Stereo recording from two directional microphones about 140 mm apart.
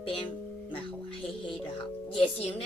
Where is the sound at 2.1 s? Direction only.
40° left (ahead or behind).